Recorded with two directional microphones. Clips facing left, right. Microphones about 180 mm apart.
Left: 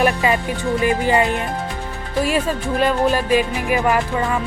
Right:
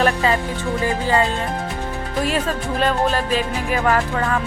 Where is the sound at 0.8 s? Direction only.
20° left (ahead or behind).